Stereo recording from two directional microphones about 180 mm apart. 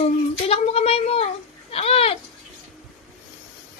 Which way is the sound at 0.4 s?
35° left (ahead or behind).